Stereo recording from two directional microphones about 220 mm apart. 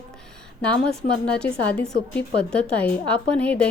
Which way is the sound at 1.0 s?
35° left (ahead or behind).